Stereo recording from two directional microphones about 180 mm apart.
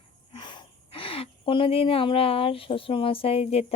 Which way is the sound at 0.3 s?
25° left (ahead or behind).